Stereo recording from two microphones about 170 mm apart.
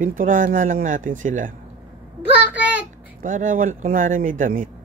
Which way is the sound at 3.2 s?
50° right (ahead or behind).